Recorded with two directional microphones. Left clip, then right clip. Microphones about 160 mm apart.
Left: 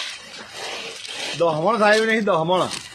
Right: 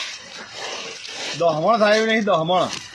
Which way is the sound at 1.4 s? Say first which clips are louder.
Right 1 dB; 25° left (ahead or behind).